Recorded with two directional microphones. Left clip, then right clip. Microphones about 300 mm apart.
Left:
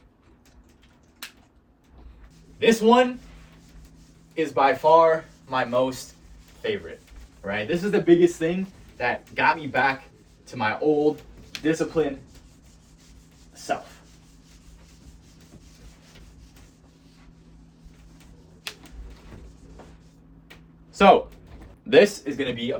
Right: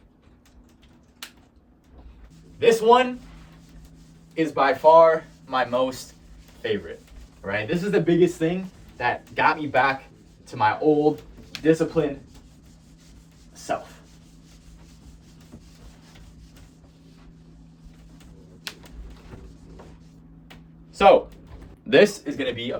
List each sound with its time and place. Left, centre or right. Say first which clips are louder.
2.6 s speech: right 1 dB; centre
4.4 s speech: even; centre
7.4 s speech: even; centre
13.6 s chopping: even; centre
20.9 s a sound: right 1 dB; centre
21.8 s speech: even; centre